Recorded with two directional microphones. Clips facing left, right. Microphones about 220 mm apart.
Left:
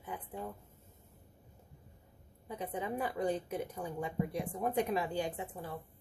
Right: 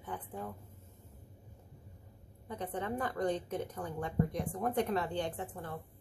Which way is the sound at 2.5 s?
10° left (ahead or behind).